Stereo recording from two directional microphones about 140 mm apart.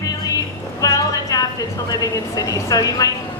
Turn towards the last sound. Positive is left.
turn(degrees=25)  # may be behind; listen again after turning